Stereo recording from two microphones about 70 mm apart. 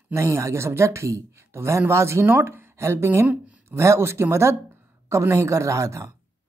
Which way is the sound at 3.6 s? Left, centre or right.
Right.